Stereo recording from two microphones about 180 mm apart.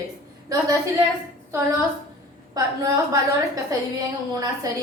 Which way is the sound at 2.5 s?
20° right (ahead or behind).